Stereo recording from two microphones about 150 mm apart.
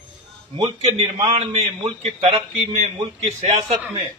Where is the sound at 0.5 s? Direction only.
40° right (ahead or behind).